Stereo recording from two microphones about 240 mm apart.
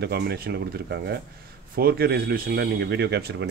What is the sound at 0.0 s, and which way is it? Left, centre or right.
Speech, right.